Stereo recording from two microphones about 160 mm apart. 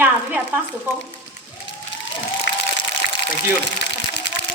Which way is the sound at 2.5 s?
90° left.